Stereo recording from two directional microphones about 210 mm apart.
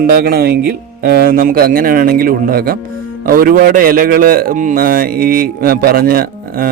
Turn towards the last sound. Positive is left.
turn(degrees=-45)  # may be behind; listen again after turning